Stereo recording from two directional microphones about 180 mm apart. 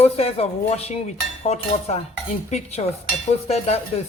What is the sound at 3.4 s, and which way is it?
Speech, 35° left (ahead or behind).